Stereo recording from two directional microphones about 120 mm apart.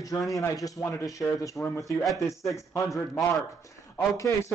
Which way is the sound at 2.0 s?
Centre (ahead or behind).